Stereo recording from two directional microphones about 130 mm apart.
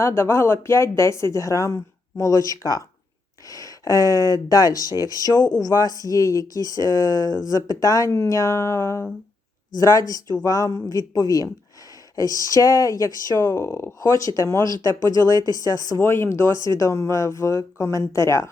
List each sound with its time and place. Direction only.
0.0 s speech: 20° left (ahead or behind)